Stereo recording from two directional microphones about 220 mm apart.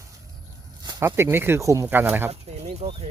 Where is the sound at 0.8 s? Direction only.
15° right (ahead or behind).